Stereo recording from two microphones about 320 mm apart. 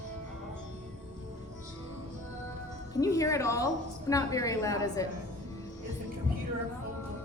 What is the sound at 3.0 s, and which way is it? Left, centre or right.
A woman's voice, centre.